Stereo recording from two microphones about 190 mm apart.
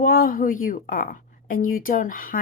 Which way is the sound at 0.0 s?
50° left (ahead or behind).